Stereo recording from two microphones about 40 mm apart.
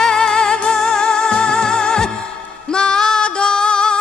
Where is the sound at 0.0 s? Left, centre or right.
Centre.